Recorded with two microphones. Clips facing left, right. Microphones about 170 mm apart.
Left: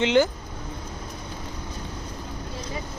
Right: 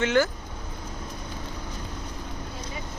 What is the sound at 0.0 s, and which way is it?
Speech, 20° left (ahead or behind).